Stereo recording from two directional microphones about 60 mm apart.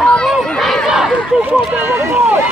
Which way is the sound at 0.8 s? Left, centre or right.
Centre.